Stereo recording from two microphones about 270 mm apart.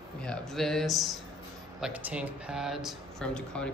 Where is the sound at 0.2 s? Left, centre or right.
Centre.